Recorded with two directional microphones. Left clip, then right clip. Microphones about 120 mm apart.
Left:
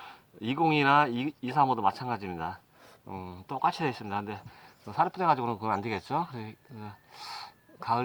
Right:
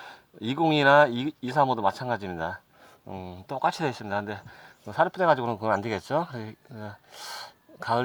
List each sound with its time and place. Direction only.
0.0 s a sound: 35° left (ahead or behind)
0.8 s speech: 30° left (ahead or behind)
3.1 s speech: 45° right (ahead or behind)
3.5 s speech: 35° left (ahead or behind)